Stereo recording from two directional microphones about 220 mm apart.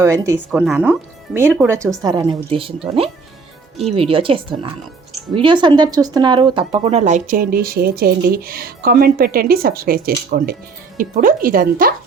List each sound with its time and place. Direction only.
0.0 s speech: 15° right (ahead or behind); by 11.9 s 40° right (ahead or behind)